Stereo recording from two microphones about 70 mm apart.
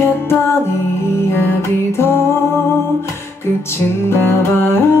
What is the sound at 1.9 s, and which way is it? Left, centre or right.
Music, left.